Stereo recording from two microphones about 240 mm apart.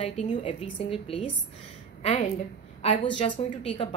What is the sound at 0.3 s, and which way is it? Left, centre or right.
A woman's voice, left.